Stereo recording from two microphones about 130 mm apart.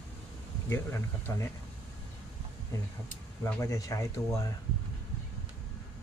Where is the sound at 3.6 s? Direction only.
25° left (ahead or behind).